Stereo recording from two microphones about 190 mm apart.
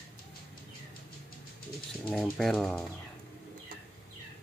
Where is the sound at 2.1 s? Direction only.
Centre (ahead or behind).